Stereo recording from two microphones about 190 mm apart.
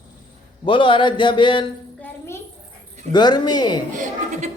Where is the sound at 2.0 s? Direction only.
15° left (ahead or behind).